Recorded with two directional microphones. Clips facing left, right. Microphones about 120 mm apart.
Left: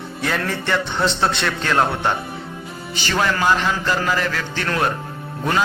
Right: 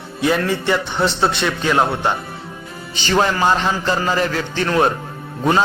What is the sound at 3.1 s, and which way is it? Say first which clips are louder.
A man's voice: right 3 dB; 30° right (ahead or behind).